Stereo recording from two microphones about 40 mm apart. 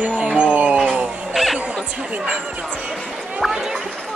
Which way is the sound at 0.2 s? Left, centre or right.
Right.